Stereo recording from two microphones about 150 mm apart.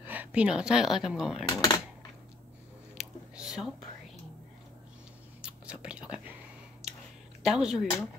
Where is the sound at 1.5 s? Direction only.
25° left (ahead or behind).